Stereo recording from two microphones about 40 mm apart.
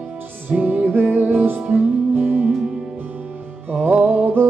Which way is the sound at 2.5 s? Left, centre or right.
Centre.